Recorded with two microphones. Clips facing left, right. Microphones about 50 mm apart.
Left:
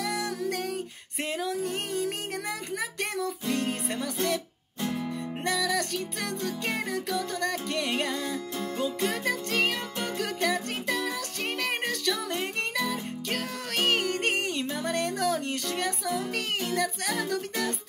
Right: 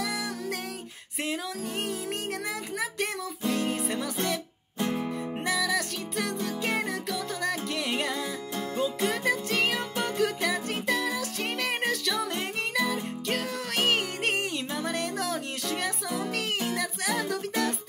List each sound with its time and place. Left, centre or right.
2.8 s music: centre
4.8 s music: right
5.4 s music: centre